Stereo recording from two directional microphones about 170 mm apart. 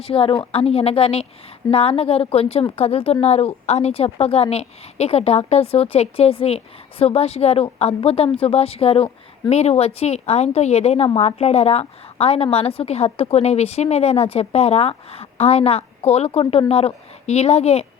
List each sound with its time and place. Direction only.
0.0 s speech: 35° left (ahead or behind)